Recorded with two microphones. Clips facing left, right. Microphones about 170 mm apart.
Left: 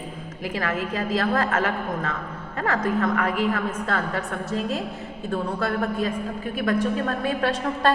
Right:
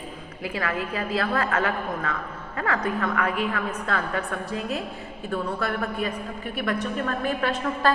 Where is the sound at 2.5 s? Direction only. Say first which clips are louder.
Left 1 dB; 40° left (ahead or behind).